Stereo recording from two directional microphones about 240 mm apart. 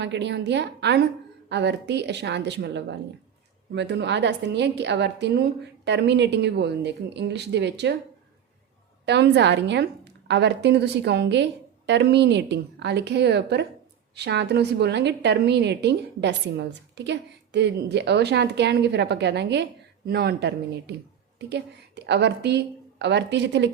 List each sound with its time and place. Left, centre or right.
0.0 s a woman's voice: right
9.0 s a woman's voice: right